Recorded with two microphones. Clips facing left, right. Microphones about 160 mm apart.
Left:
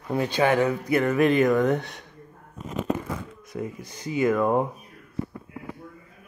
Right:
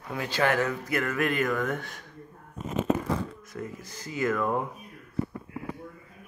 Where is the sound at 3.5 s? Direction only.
20° left (ahead or behind).